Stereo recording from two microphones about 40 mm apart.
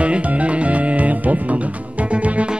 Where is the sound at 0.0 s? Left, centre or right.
Right.